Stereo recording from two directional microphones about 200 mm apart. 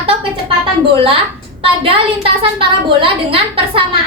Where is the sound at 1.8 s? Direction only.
25° right (ahead or behind).